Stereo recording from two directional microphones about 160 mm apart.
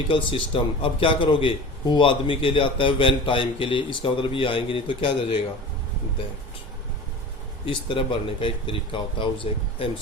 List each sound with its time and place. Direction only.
0.1 s a man's voice: 35° left (ahead or behind)
7.6 s a man's voice: 30° left (ahead or behind)